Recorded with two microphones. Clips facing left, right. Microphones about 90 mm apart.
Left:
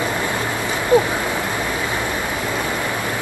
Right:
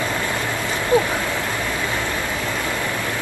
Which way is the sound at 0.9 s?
20° left (ahead or behind).